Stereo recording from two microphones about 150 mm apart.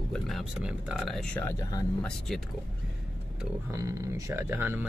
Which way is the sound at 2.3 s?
Centre (ahead or behind).